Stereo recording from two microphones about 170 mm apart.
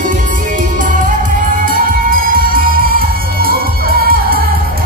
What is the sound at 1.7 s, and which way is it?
Music, 55° right (ahead or behind).